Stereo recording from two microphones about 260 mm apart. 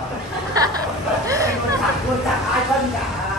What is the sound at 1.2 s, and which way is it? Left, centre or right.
Hubbub, centre.